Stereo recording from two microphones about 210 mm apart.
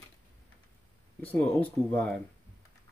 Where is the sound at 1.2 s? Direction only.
10° left (ahead or behind).